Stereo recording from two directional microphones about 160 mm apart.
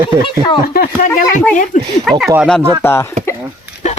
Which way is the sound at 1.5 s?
55° left (ahead or behind).